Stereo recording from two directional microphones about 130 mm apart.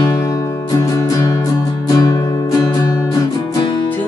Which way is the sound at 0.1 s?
25° left (ahead or behind).